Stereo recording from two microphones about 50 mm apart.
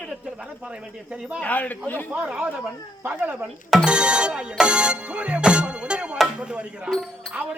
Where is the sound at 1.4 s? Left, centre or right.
Left.